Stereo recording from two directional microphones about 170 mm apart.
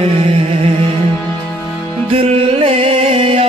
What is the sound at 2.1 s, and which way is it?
Music, 35° right (ahead or behind).